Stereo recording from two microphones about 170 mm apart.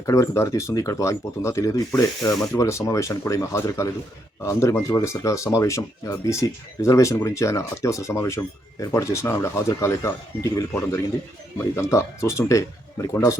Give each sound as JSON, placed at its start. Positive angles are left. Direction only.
{"t": 0.0, "sound": "speech", "side_deg": 20}